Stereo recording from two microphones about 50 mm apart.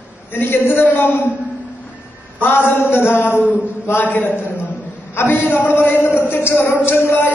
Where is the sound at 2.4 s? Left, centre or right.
Left.